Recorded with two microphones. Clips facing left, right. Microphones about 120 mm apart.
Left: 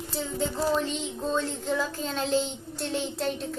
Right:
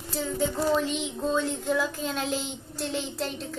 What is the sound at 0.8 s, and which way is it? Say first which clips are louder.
Child singing: right 2 dB; 5° right (ahead or behind).